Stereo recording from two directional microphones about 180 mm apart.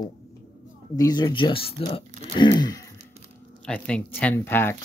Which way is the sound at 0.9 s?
20° left (ahead or behind).